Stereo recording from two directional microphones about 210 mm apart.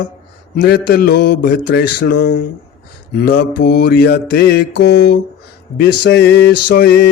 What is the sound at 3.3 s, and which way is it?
Mantra, 90° left.